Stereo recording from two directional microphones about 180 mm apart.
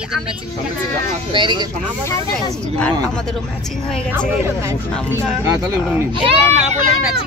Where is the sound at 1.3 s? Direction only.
25° right (ahead or behind).